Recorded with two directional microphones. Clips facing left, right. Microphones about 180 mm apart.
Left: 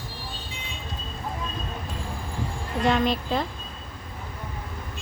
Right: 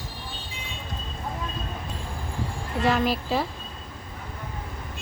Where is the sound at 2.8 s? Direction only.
5° right (ahead or behind).